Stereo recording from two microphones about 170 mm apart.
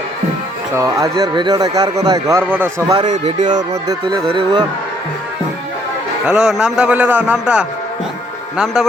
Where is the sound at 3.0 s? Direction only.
45° right (ahead or behind).